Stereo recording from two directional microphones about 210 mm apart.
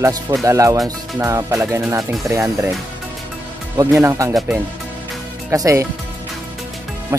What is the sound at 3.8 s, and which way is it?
Speech, 15° right (ahead or behind).